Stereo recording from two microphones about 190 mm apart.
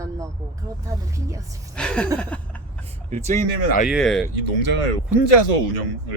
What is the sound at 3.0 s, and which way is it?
Speech, 40° right (ahead or behind).